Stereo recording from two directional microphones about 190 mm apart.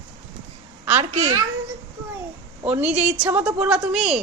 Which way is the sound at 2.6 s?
5° right (ahead or behind).